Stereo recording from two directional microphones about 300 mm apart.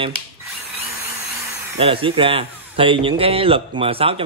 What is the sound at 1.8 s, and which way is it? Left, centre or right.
A man's voice, centre.